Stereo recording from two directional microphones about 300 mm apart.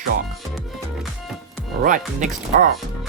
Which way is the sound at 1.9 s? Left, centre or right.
Right.